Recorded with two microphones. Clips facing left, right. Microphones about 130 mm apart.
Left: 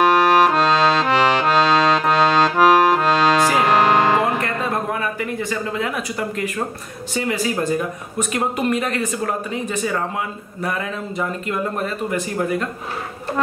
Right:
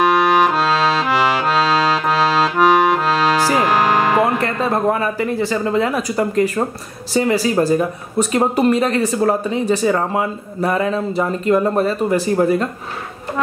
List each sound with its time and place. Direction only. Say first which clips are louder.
0.0 s accordion: even; centre (ahead or behind)
4.4 s music: right 4 dB; 35° right (ahead or behind)
5.3 s speech: right 6 dB; 30° right (ahead or behind)